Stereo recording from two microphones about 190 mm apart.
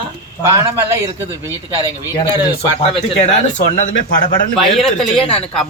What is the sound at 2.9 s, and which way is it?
Speech, 35° left (ahead or behind).